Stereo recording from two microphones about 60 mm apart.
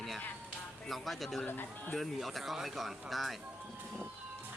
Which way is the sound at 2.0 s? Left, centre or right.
Centre.